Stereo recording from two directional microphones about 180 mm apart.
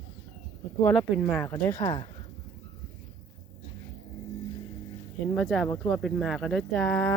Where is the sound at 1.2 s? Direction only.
5° left (ahead or behind).